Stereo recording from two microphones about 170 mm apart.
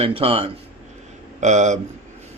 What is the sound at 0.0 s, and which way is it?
Speech, 35° right (ahead or behind).